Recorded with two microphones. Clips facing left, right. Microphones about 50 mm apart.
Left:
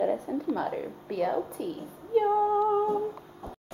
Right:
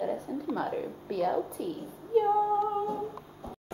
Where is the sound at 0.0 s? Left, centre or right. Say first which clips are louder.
Left 4 dB; left.